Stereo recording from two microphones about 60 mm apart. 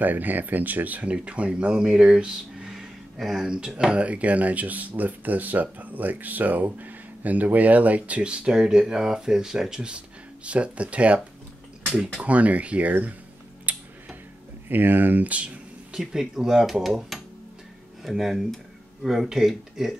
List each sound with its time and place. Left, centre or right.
0.0 s speech: right; by 2.9 s centre
3.2 s speech: centre
3.4 s speech: centre
12.2 s speech: right
13.7 s tick-tock: right
14.7 s speech: right; by 20.0 s centre